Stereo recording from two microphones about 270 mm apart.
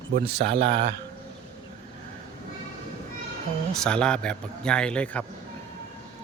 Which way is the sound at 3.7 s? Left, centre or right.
Centre.